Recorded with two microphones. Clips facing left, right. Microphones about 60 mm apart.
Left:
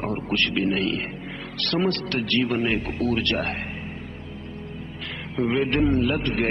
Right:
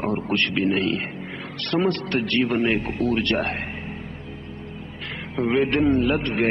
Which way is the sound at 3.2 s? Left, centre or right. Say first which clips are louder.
Right 2 dB; right.